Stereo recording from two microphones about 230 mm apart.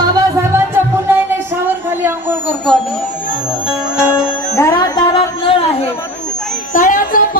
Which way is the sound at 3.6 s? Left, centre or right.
Centre.